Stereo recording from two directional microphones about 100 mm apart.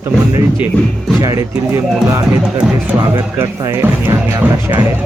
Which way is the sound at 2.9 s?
25° right (ahead or behind).